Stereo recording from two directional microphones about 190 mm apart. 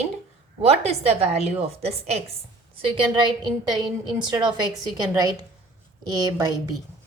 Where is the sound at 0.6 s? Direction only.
35° right (ahead or behind).